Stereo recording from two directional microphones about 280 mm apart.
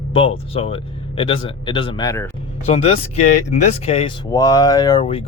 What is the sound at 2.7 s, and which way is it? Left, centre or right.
Speech, left.